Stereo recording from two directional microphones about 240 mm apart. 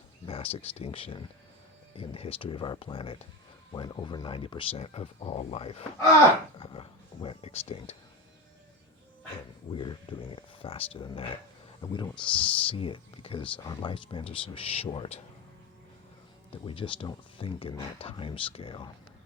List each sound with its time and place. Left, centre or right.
0.3 s speech: left
9.7 s speech: centre
16.5 s speech: left